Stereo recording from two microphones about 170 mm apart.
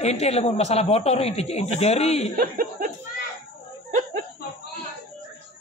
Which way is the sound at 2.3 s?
60° right (ahead or behind).